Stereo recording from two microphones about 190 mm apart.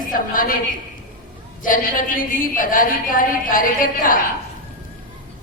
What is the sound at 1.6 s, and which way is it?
A woman's voice, 45° left (ahead or behind).